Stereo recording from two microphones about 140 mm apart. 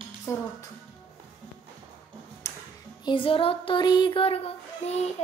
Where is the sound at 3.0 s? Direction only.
35° left (ahead or behind).